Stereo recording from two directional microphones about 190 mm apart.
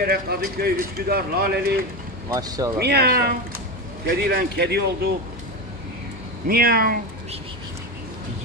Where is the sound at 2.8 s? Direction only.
60° right (ahead or behind).